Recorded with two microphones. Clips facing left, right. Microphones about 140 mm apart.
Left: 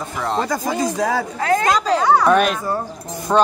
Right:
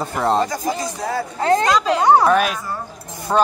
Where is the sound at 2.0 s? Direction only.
25° right (ahead or behind).